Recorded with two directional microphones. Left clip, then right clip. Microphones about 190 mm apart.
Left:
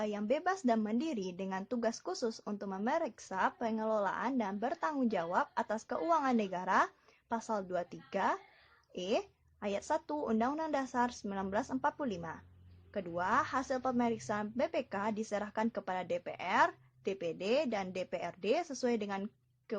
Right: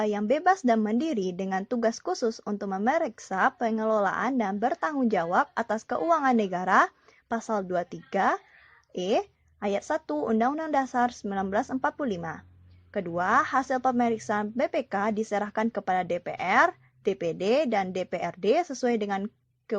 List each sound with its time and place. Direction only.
0.0 s a woman's voice: 30° right (ahead or behind)